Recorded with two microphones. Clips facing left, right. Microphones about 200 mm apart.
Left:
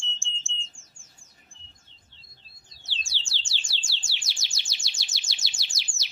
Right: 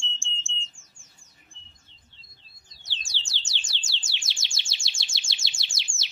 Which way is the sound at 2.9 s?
15° right (ahead or behind).